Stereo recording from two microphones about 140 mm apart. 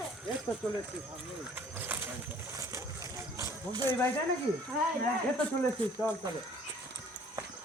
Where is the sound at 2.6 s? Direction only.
20° right (ahead or behind).